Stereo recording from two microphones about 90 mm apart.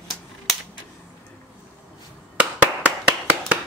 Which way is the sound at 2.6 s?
15° right (ahead or behind).